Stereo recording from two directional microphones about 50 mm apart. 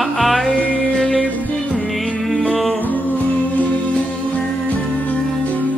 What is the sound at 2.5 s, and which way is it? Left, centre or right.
Music, centre.